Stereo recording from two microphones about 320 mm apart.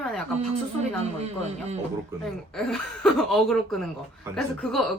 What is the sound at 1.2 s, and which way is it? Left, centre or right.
Speech, centre.